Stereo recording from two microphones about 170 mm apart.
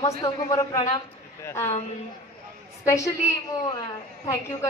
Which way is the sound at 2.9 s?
20° left (ahead or behind).